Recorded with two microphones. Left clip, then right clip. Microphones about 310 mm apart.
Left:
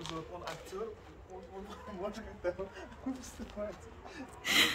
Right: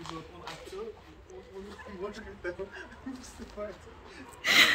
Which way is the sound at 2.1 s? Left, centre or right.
Left.